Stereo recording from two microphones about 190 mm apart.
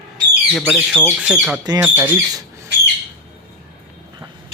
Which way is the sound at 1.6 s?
20° right (ahead or behind).